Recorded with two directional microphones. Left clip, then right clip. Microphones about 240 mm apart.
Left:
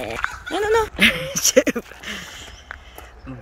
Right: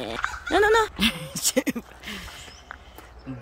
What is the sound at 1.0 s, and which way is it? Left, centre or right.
Speech, centre.